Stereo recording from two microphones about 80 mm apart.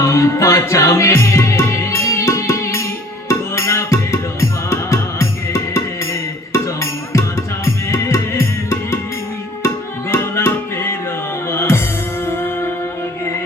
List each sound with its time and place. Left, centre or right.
0.0 s music: left
7.1 s music: left